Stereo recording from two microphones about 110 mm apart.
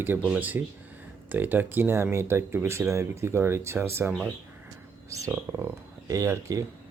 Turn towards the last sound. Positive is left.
turn(degrees=-30)  # may be behind; listen again after turning